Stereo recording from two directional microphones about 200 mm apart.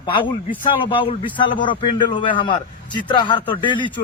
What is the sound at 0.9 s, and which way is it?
A man's voice, 25° left (ahead or behind).